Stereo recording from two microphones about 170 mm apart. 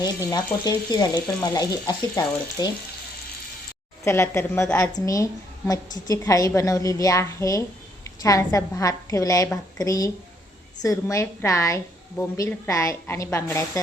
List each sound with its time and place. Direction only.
0.0 s a woman's voice: 20° left (ahead or behind)
4.0 s a woman's voice: 15° left (ahead or behind)